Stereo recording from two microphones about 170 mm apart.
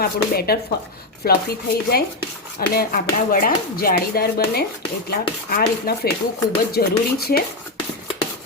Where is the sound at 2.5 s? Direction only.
60° left (ahead or behind).